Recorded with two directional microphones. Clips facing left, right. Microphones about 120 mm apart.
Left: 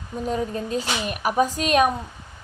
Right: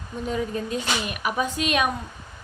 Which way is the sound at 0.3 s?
35° left (ahead or behind).